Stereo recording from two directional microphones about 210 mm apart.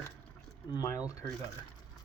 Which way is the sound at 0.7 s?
15° left (ahead or behind).